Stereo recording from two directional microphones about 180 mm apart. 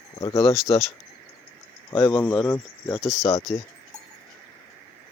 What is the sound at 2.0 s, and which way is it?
Speech, 10° left (ahead or behind).